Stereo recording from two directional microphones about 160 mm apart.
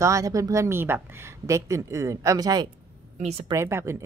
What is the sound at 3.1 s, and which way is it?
Speech, 45° right (ahead or behind).